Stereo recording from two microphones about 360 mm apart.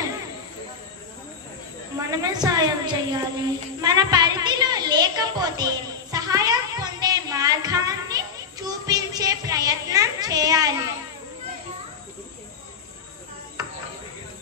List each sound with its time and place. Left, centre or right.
2.0 s a woman's voice: centre
3.8 s a sound: centre
13.6 s cricket: centre